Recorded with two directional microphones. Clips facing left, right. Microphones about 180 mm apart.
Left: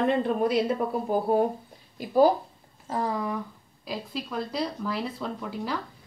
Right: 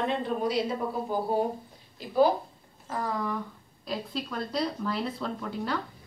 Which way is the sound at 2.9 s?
20° left (ahead or behind).